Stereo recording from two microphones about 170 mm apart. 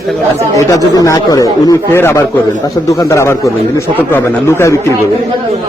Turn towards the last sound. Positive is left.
turn(degrees=15)  # may be behind; listen again after turning